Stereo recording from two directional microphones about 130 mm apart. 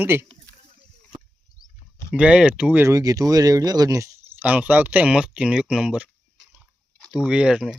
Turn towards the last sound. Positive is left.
turn(degrees=-5)  # may be behind; listen again after turning